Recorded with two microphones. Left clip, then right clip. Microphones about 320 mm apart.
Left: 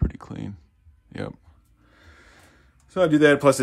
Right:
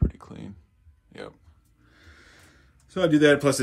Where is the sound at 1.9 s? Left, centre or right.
Left.